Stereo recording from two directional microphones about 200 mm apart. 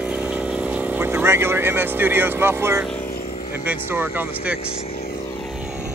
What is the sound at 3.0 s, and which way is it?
Vehicle, 45° left (ahead or behind).